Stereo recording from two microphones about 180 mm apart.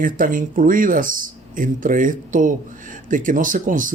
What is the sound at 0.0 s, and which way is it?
Speech, 50° right (ahead or behind).